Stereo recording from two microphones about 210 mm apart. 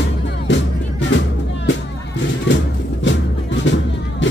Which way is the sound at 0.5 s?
60° left (ahead or behind).